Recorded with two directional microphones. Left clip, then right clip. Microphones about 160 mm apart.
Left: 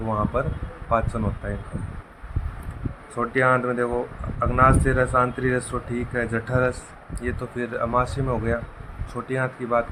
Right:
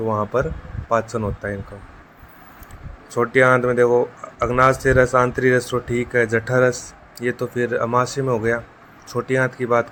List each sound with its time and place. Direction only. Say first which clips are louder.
0.3 s speech: right 5 dB; 45° right (ahead or behind)
3.2 s speech: right 5 dB; 55° right (ahead or behind)